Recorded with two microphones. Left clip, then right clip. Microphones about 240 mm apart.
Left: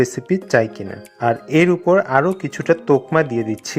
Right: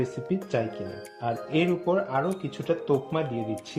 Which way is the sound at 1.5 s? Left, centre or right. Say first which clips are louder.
Left 10 dB; centre.